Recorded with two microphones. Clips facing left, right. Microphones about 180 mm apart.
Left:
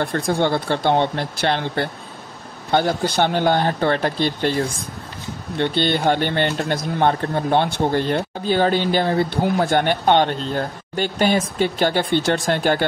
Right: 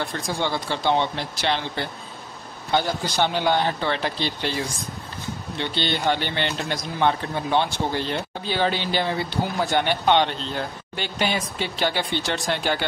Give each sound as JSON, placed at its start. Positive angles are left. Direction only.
{"t": 0.0, "sound": "speech", "side_deg": 55}